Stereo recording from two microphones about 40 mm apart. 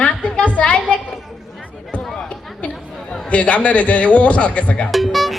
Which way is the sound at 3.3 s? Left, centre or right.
Left.